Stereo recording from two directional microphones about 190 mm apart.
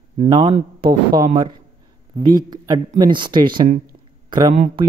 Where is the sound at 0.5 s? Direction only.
30° right (ahead or behind).